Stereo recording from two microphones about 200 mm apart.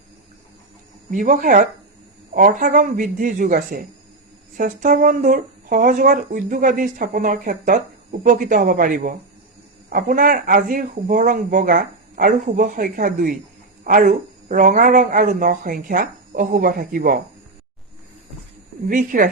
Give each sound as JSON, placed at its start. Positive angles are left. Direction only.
{"t": 1.1, "sound": "speech", "side_deg": -40}
{"t": 18.9, "sound": "speech", "side_deg": -45}